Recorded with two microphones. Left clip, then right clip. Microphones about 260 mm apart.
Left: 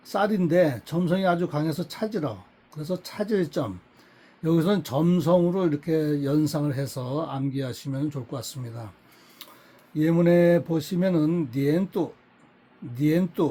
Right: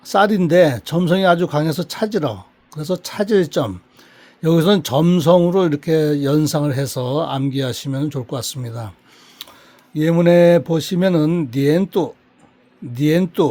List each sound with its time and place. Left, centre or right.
0.0 s speech: right
9.4 s tick-tock: right
9.9 s speech: right